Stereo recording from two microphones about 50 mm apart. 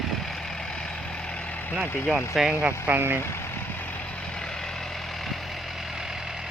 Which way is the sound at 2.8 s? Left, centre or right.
Right.